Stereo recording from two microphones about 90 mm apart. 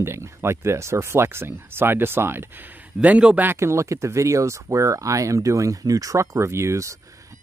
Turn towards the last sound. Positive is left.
turn(degrees=-35)  # may be behind; listen again after turning